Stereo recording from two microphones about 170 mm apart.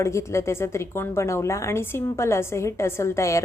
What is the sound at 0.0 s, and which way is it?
A woman's voice, 15° left (ahead or behind).